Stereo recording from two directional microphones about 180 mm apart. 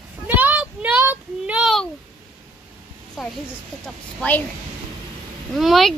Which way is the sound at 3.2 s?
Centre (ahead or behind).